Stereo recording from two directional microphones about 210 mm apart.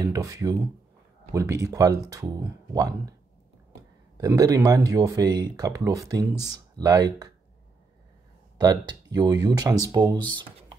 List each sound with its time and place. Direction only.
0.0 s speech: 15° right (ahead or behind)
4.2 s speech: 15° right (ahead or behind)
8.5 s speech: 20° right (ahead or behind)